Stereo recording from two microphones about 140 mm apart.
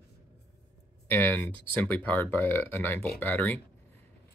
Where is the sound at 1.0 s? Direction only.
15° left (ahead or behind).